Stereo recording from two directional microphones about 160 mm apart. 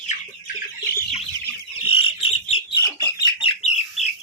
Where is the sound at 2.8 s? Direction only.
20° left (ahead or behind).